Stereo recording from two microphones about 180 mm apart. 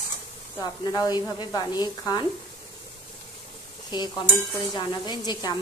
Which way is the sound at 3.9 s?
25° left (ahead or behind).